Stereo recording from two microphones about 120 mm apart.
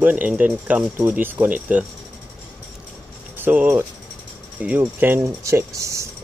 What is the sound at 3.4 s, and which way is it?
Speech, 15° right (ahead or behind).